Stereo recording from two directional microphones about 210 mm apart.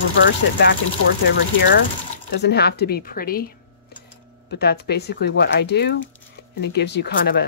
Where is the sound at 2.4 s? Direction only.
50° left (ahead or behind).